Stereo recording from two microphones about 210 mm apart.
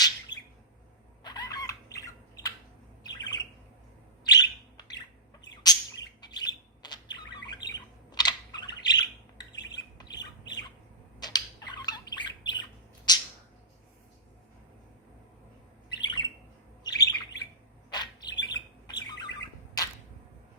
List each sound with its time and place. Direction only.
0.3 s bird: 20° left (ahead or behind)
1.2 s squawk: 20° left (ahead or behind)
3.1 s bird: 20° left (ahead or behind)
9.7 s squawk: 20° left (ahead or behind)
11.2 s bird: 20° left (ahead or behind)
13.1 s a sound: 20° left (ahead or behind)
15.9 s bird: 20° left (ahead or behind)